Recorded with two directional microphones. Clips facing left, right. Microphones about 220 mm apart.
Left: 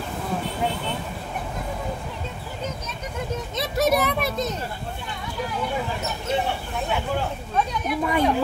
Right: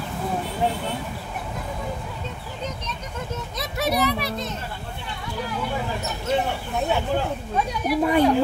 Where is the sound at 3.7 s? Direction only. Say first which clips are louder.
Left 2 dB; 45° left (ahead or behind).